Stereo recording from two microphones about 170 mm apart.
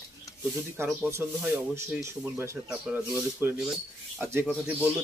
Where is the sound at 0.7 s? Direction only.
15° right (ahead or behind).